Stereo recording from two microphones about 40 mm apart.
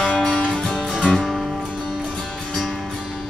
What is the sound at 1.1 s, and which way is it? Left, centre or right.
Music, centre.